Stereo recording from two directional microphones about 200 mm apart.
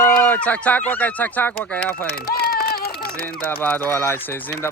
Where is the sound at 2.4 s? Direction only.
50° left (ahead or behind).